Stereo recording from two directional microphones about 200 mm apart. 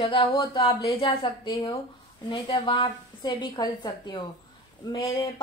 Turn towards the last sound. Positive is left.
turn(degrees=25)  # may be behind; listen again after turning